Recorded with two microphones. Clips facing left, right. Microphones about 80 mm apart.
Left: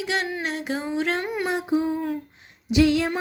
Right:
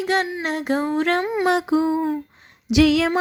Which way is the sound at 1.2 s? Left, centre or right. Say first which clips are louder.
Right 5 dB; right.